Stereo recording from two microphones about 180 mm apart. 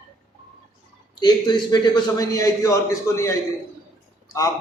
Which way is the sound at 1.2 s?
25° left (ahead or behind).